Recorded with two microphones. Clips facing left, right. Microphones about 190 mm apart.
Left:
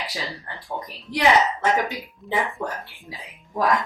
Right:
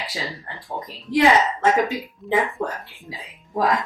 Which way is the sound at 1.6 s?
20° right (ahead or behind).